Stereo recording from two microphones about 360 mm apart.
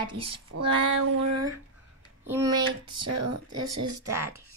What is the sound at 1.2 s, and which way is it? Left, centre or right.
Speech, right.